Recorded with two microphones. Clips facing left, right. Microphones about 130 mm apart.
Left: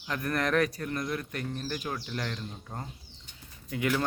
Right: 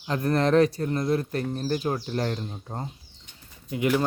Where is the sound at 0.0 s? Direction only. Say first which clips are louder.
Right 7 dB; 30° right (ahead or behind).